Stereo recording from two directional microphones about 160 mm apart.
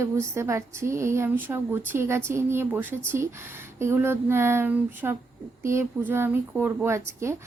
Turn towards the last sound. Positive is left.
turn(degrees=-15)  # may be behind; listen again after turning